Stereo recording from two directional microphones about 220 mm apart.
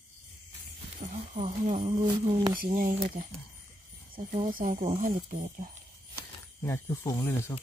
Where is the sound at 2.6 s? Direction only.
35° right (ahead or behind).